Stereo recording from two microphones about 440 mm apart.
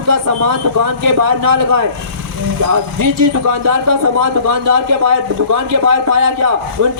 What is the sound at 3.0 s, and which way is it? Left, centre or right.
Speech, right.